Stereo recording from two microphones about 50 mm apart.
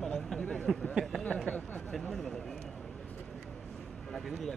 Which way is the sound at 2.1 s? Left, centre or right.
Centre.